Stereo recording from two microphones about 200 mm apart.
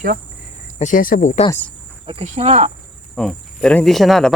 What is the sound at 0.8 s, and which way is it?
Speech, 40° left (ahead or behind).